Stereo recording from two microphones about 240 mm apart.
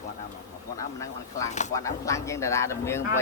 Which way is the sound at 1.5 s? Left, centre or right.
Left.